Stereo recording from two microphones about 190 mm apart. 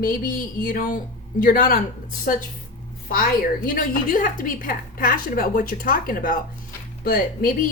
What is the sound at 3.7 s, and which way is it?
A woman's voice, 45° left (ahead or behind).